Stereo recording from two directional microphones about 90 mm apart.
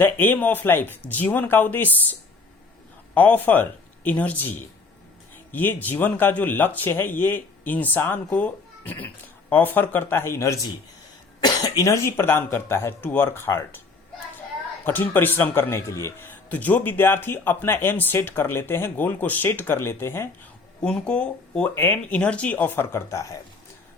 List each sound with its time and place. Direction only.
0.0 s speech: 20° left (ahead or behind)
3.2 s speech: 20° left (ahead or behind)
11.3 s speech: 50° left (ahead or behind); by 13.8 s 30° left (ahead or behind)
14.8 s speech: 20° left (ahead or behind)
16.3 s speech: 20° left (ahead or behind)
20.8 s speech: 10° left (ahead or behind); by 23.4 s 35° left (ahead or behind)